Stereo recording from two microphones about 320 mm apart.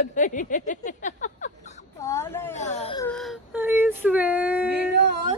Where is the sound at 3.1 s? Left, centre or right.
Centre.